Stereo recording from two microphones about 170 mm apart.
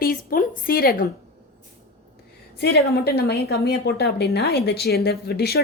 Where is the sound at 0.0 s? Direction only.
60° left (ahead or behind).